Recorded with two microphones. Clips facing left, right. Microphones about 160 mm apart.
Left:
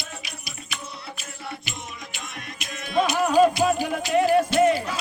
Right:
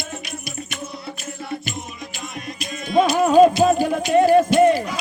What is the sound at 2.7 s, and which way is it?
Music, centre (ahead or behind).